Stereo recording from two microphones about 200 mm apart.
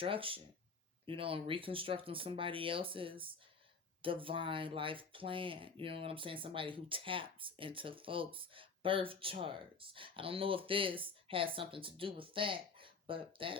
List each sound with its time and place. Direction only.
0.0 s speech: 25° right (ahead or behind)